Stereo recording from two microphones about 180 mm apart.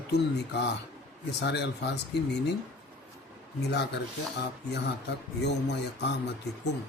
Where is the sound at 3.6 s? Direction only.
70° left (ahead or behind).